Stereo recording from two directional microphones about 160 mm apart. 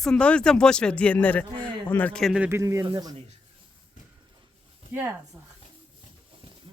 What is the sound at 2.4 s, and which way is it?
Speech, 15° right (ahead or behind).